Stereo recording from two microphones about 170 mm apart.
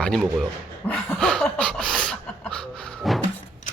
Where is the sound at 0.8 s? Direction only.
5° left (ahead or behind).